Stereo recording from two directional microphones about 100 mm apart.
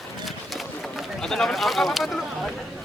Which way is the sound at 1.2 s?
5° left (ahead or behind).